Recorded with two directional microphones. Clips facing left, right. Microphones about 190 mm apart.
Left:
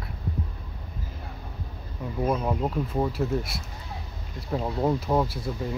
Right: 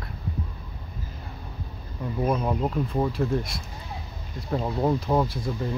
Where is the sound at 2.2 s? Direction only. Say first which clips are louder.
Right 1 dB; centre (ahead or behind).